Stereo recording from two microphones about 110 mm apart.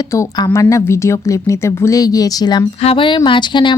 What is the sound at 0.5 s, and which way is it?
Speech, 30° left (ahead or behind).